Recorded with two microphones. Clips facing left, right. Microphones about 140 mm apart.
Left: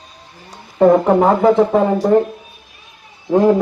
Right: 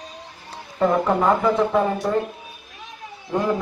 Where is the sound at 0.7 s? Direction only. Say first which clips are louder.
Left 8 dB; 50° left (ahead or behind).